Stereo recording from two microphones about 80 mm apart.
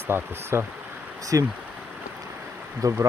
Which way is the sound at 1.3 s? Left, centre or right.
Right.